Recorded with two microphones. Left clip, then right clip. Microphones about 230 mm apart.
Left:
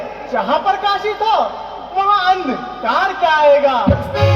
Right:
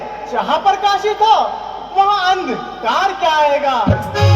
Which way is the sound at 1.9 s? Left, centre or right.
Right.